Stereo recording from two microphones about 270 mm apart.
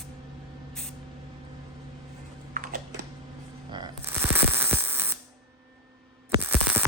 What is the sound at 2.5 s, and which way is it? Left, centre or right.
Typing, right.